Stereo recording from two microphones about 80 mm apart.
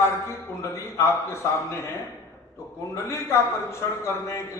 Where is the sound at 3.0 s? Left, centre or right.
Left.